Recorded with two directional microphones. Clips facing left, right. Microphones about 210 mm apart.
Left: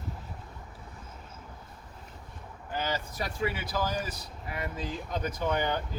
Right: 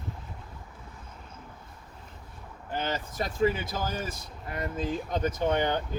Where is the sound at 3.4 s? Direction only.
45° right (ahead or behind).